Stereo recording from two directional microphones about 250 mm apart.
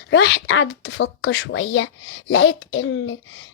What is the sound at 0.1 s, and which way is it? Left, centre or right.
Speech, left.